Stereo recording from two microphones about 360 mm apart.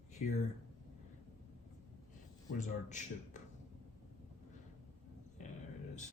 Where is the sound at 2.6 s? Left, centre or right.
Centre.